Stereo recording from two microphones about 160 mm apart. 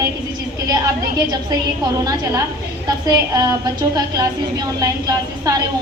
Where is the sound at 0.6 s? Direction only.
25° right (ahead or behind).